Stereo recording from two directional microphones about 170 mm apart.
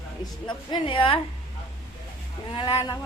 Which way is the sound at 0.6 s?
30° left (ahead or behind).